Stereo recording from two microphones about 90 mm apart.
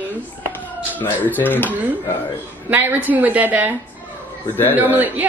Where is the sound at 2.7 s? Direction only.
25° right (ahead or behind).